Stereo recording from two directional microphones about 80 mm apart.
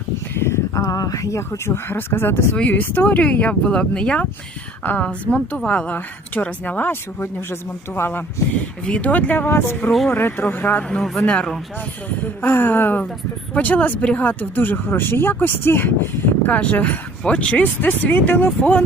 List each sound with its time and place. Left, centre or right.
0.3 s speech: left
8.9 s speech: centre
9.5 s speech: left
10.8 s speech: centre
12.0 s speech: left